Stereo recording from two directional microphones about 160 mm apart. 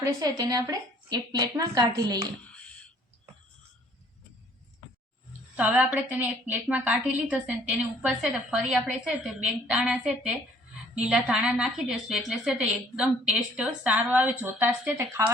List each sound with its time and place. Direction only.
0.0 s a woman's voice: 20° right (ahead or behind)
5.5 s a woman's voice: 10° right (ahead or behind)